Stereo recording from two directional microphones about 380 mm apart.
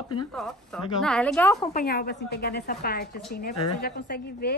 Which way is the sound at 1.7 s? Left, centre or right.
Left.